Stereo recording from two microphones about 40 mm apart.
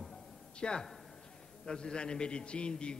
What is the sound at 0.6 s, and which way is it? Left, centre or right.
A man's voice, left.